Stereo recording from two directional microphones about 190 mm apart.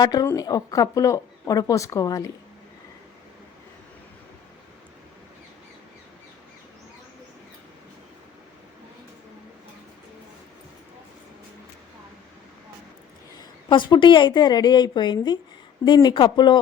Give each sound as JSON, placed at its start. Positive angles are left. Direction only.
{"t": 0.0, "sound": "speech", "side_deg": 20}
{"t": 13.7, "sound": "speech", "side_deg": 25}